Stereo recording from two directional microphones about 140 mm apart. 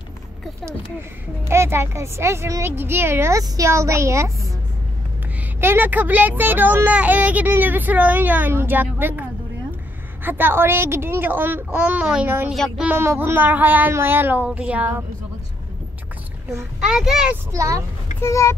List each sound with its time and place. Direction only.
1.5 s a woman's voice: 20° right (ahead or behind)
5.6 s speech: 15° right (ahead or behind)
10.2 s speech: 15° right (ahead or behind)
12.5 s a child's voice: centre (ahead or behind)
12.8 s speech: 15° right (ahead or behind)
16.8 s a child's voice: 5° right (ahead or behind)
17.5 s a woman's voice: 25° right (ahead or behind)
18.2 s speech: 20° left (ahead or behind)